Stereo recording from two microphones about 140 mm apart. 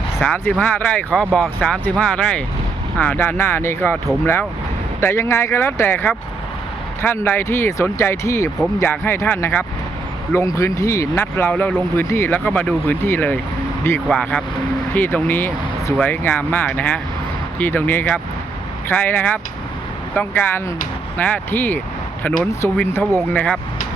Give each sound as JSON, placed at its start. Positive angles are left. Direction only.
{"t": 0.2, "sound": "speech", "side_deg": 5}
{"t": 4.9, "sound": "speech", "side_deg": 20}